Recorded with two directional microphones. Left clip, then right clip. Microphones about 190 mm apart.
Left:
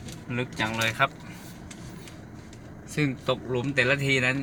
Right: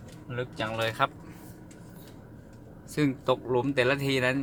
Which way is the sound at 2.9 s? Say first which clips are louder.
Right 1 dB; 25° right (ahead or behind).